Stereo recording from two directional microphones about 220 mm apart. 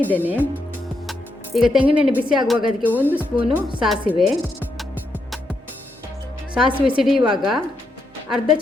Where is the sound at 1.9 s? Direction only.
5° right (ahead or behind).